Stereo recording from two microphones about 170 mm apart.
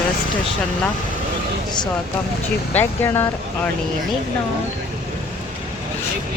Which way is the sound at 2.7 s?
15° left (ahead or behind).